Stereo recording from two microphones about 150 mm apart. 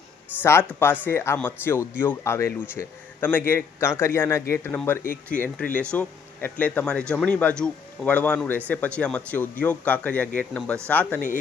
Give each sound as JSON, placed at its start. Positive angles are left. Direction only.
{"t": 0.4, "sound": "speech", "side_deg": 15}